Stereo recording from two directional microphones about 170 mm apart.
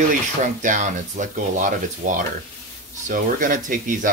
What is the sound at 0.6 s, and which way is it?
Speech, 50° right (ahead or behind).